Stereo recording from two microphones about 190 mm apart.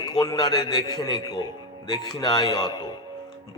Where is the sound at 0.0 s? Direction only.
20° left (ahead or behind).